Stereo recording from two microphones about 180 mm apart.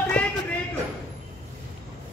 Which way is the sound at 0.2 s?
5° left (ahead or behind).